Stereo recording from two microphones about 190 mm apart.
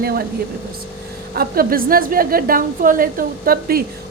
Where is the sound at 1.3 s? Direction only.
50° right (ahead or behind).